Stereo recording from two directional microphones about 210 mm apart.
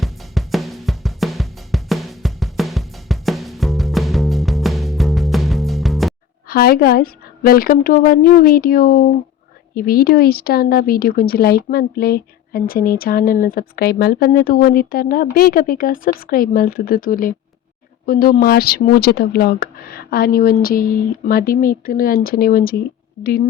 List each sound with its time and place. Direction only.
0.0 s drum: centre (ahead or behind)
6.5 s speech: 45° left (ahead or behind)